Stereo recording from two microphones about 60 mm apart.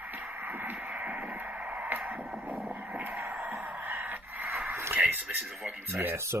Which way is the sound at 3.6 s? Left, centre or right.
Right.